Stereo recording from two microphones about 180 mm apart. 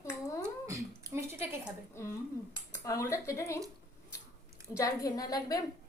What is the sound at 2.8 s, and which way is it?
Speech, 15° left (ahead or behind).